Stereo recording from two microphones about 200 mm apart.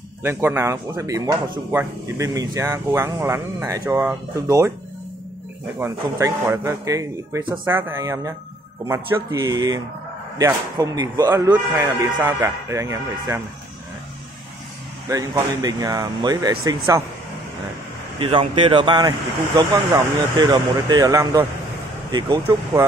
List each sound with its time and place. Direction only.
0.2 s speech: 10° right (ahead or behind)
5.8 s speech: 15° right (ahead or behind)
15.0 s speech: 20° right (ahead or behind)
18.2 s speech: 25° right (ahead or behind)